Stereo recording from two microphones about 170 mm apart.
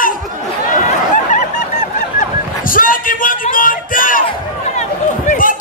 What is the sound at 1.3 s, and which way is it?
Honk, 45° left (ahead or behind).